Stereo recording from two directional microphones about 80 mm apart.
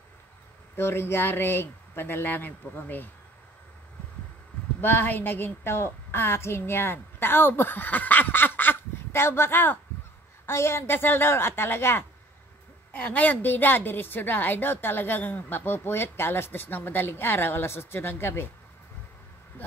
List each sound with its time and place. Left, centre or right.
0.7 s a woman's voice: left
4.8 s a woman's voice: left